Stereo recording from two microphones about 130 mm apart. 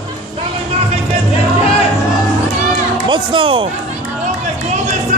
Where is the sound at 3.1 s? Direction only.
40° right (ahead or behind).